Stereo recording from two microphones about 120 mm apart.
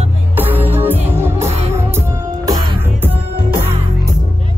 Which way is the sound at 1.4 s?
65° right (ahead or behind).